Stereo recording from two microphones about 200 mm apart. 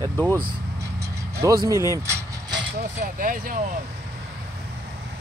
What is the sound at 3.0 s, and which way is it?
Speech, 45° right (ahead or behind).